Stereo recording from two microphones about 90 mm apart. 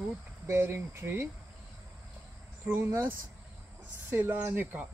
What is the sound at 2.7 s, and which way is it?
Speech, 25° right (ahead or behind).